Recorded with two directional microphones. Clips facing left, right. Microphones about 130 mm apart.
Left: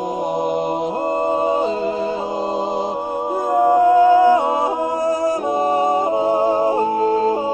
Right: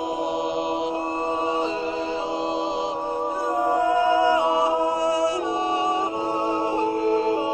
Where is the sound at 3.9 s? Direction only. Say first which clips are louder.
Left 7 dB; 45° left (ahead or behind).